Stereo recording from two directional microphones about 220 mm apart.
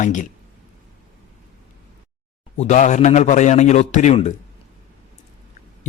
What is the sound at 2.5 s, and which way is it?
A man's voice, 30° left (ahead or behind).